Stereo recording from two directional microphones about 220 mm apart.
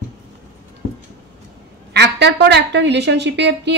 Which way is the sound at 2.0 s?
50° right (ahead or behind).